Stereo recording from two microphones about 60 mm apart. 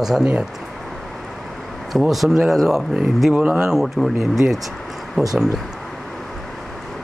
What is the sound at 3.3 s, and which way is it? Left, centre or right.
Speech, right.